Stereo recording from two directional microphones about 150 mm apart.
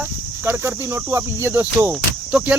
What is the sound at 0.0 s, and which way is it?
Speech, 15° right (ahead or behind).